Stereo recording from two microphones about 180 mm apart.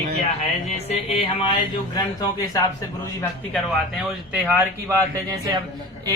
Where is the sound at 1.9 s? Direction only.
20° left (ahead or behind).